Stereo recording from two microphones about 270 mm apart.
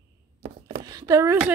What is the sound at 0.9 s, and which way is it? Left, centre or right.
Speech, centre.